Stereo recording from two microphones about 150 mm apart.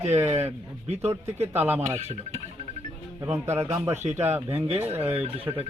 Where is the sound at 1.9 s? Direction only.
45° right (ahead or behind).